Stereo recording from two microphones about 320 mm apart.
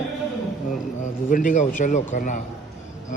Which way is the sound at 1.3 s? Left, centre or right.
Left.